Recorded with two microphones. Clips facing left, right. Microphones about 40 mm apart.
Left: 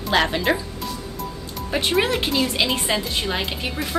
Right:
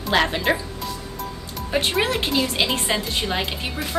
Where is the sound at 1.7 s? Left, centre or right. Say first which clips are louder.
Left 1 dB; centre.